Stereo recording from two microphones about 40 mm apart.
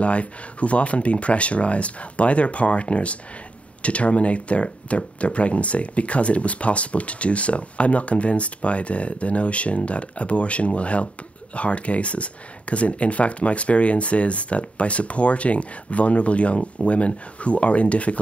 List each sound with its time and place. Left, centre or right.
0.0 s speech: left